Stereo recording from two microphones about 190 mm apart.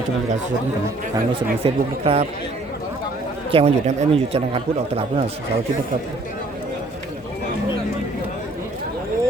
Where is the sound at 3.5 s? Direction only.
30° right (ahead or behind).